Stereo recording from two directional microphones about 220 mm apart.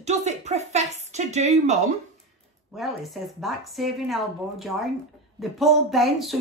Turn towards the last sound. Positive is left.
turn(degrees=0)  # may be behind; listen again after turning